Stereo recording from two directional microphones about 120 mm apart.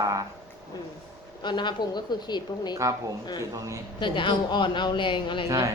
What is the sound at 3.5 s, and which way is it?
Speech, 30° right (ahead or behind).